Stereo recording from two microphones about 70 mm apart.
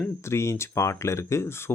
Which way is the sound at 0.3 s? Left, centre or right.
Left.